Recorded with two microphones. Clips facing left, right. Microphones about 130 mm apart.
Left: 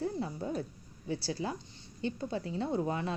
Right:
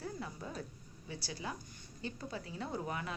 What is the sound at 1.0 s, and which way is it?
A woman's voice, 35° left (ahead or behind).